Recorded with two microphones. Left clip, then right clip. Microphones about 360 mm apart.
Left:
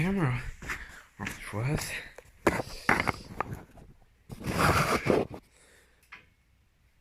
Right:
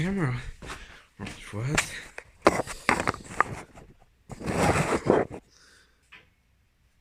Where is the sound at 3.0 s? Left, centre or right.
Right.